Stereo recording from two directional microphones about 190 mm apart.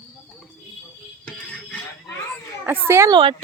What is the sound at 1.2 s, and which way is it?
Music, 5° left (ahead or behind).